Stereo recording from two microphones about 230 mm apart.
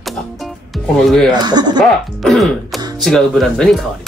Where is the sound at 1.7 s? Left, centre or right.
Centre.